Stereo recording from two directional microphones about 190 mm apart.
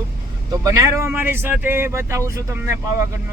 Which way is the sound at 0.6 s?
15° right (ahead or behind).